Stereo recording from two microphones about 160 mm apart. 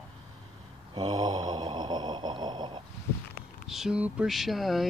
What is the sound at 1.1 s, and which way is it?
Snoring, 25° right (ahead or behind).